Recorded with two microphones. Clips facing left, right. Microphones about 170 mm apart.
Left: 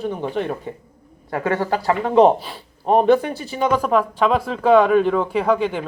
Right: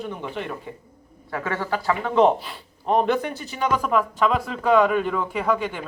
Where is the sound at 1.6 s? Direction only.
40° left (ahead or behind).